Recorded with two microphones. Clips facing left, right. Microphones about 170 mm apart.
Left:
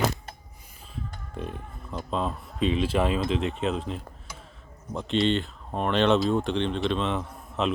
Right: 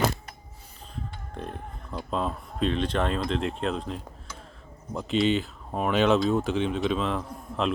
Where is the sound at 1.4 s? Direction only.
Centre (ahead or behind).